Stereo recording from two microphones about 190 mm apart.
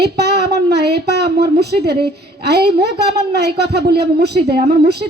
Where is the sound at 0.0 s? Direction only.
60° right (ahead or behind).